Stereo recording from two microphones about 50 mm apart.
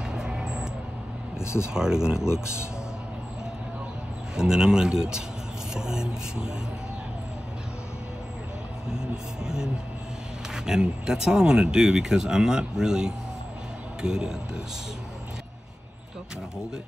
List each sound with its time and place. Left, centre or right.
0.1 s vehicle: centre
1.4 s speech: left
1.7 s speech: centre
2.2 s speech: left
4.4 s speech: centre
8.9 s speech: centre